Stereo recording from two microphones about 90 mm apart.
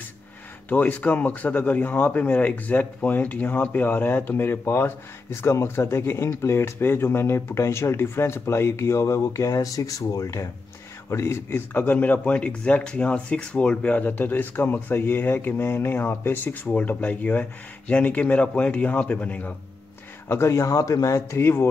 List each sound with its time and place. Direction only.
0.7 s speech: 20° left (ahead or behind)
20.2 s speech: 30° left (ahead or behind)